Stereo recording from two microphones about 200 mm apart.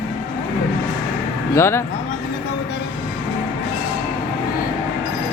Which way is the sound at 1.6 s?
15° left (ahead or behind).